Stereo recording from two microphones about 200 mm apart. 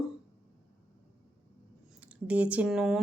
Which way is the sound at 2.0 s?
5° right (ahead or behind).